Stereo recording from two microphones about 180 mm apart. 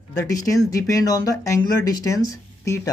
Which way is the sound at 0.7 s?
20° left (ahead or behind).